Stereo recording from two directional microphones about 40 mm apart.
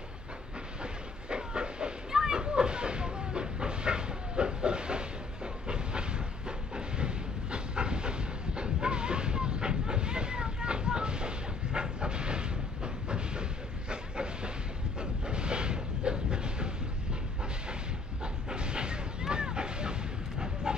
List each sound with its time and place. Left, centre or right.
1.3 s a sound: right
15.0 s train: right
18.2 s vehicle: right